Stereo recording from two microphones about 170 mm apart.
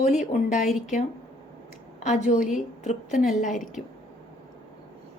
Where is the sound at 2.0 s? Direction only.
45° left (ahead or behind).